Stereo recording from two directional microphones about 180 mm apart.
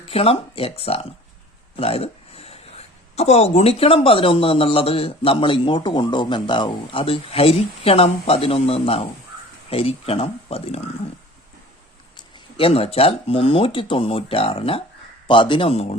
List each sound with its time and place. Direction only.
0.1 s speech: 35° left (ahead or behind)
12.1 s a man's voice: 30° left (ahead or behind)